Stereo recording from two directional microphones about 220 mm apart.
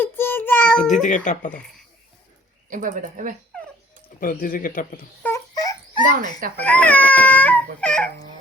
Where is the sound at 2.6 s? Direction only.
35° right (ahead or behind).